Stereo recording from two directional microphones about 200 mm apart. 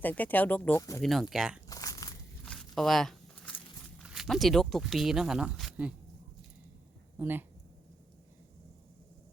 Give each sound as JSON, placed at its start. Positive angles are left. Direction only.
{"t": 0.0, "sound": "speech", "side_deg": 10}
{"t": 1.0, "sound": "speech", "side_deg": 0}
{"t": 1.6, "sound": "crumpling", "side_deg": 15}
{"t": 2.4, "sound": "walk", "side_deg": 0}
{"t": 7.2, "sound": "speech", "side_deg": -10}